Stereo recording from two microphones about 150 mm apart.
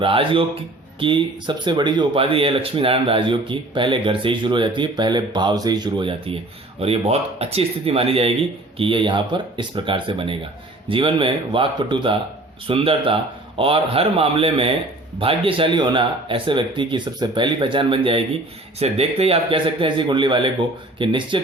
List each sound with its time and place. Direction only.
0.0 s speech: 35° right (ahead or behind)